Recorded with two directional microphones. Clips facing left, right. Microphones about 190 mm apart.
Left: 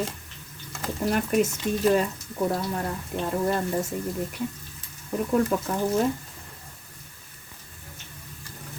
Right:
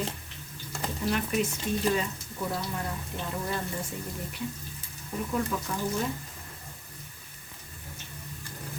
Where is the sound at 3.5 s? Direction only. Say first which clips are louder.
Left 8 dB; 50° left (ahead or behind).